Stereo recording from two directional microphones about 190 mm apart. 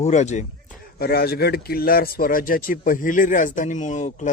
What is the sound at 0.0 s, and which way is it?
Speech, 40° left (ahead or behind).